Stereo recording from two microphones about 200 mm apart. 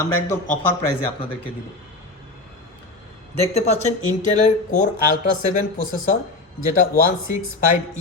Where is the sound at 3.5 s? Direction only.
35° left (ahead or behind).